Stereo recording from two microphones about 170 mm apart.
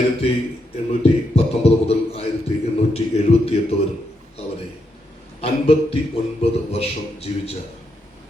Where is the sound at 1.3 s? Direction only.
35° left (ahead or behind).